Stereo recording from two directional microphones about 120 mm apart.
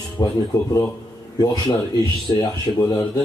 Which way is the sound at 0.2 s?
35° left (ahead or behind).